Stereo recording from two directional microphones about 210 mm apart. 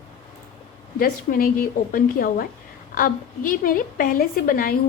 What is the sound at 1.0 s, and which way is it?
A woman's voice, 45° left (ahead or behind).